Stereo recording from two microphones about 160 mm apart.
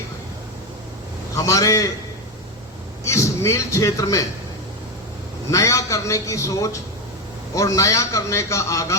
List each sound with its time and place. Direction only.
1.4 s a man's voice: 20° left (ahead or behind)
3.0 s a man's voice: 20° left (ahead or behind)
5.5 s a man's voice: 20° left (ahead or behind)